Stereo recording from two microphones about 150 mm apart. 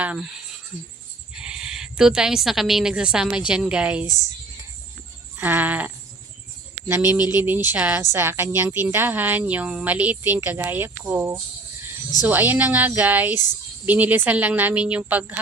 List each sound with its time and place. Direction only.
0.0 s speech: 10° right (ahead or behind)
1.3 s speech: 5° right (ahead or behind)
5.4 s speech: 10° right (ahead or behind)
7.0 s speech: 25° left (ahead or behind)
7.4 s speech: 15° right (ahead or behind)